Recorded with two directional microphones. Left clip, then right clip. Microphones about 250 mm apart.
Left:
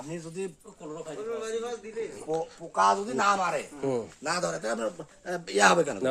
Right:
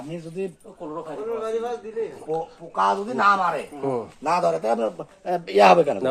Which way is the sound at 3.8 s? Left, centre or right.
Left.